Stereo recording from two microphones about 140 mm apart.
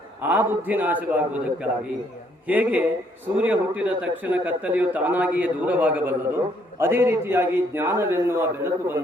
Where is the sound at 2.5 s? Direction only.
10° right (ahead or behind).